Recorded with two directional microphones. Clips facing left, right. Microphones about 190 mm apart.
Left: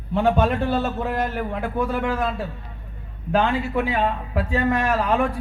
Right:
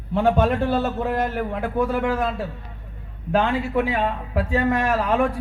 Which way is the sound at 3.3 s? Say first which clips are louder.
Even; 45° right (ahead or behind).